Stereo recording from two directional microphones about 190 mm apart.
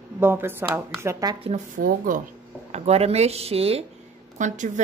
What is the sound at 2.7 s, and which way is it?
Speech, 35° right (ahead or behind).